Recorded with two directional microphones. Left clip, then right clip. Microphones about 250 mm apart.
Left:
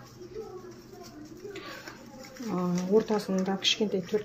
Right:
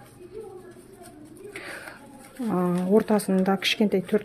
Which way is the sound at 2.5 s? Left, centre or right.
Right.